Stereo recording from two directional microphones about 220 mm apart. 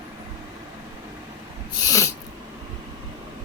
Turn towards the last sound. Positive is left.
turn(degrees=15)  # may be behind; listen again after turning